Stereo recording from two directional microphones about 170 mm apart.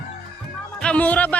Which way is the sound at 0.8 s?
5° left (ahead or behind).